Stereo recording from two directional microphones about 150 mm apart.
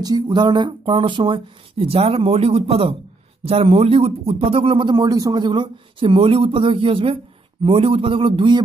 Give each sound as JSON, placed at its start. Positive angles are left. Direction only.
{"t": 0.0, "sound": "speech", "side_deg": -30}